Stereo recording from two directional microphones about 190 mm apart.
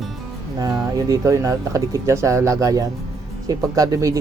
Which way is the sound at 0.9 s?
20° right (ahead or behind).